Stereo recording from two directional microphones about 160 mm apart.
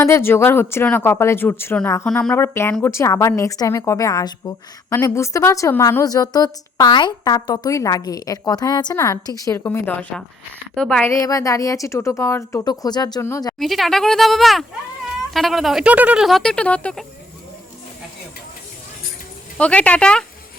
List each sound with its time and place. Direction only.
0.0 s speech: 15° left (ahead or behind)
2.3 s a woman's voice: 15° left (ahead or behind)
11.2 s a woman's voice: 20° left (ahead or behind)
13.6 s speech: centre (ahead or behind)
19.5 s speech: 5° left (ahead or behind)